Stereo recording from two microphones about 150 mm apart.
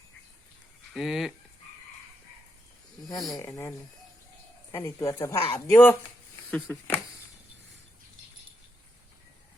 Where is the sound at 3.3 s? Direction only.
20° left (ahead or behind).